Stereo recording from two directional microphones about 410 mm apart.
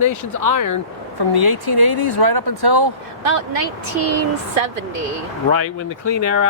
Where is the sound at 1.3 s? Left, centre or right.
Right.